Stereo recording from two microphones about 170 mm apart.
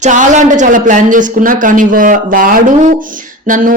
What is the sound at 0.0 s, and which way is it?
Speech, 45° right (ahead or behind).